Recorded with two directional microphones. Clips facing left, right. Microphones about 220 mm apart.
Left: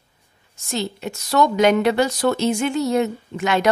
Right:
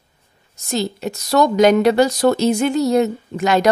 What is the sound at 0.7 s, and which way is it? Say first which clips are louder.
Speech: right 4 dB; 40° right (ahead or behind).